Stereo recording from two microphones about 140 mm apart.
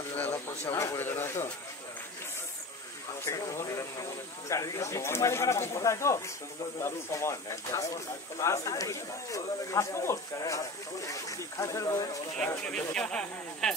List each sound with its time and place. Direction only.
0.1 s speech: 15° left (ahead or behind)
3.3 s speech: 20° left (ahead or behind)
12.4 s speech: 10° left (ahead or behind)